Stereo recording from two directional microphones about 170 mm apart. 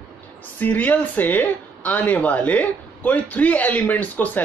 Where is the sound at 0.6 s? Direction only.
10° left (ahead or behind).